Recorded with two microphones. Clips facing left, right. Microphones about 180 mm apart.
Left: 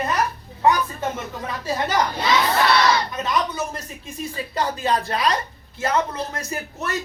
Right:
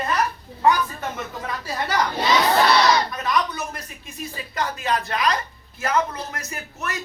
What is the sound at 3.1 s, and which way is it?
Speech, 25° left (ahead or behind).